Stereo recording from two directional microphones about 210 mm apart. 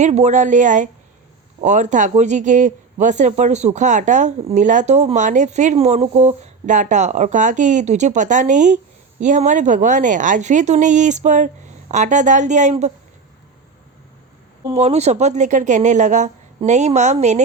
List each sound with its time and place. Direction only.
0.0 s speech: 35° right (ahead or behind)
14.7 s speech: 30° right (ahead or behind)